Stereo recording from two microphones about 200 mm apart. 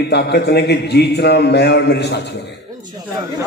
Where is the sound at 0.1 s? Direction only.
55° left (ahead or behind).